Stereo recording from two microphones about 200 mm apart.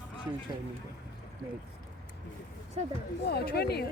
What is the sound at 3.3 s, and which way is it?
Speech, 55° left (ahead or behind).